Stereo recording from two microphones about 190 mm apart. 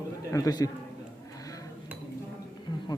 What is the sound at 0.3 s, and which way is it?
Speech, 20° left (ahead or behind).